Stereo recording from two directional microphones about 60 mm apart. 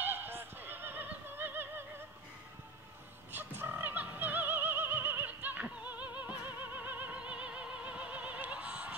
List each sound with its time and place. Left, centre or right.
0.0 s horse: right
3.3 s opera: right